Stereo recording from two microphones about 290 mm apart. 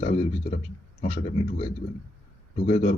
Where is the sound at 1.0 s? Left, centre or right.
Left.